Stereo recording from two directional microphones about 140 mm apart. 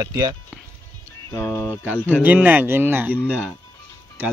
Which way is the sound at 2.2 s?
10° right (ahead or behind).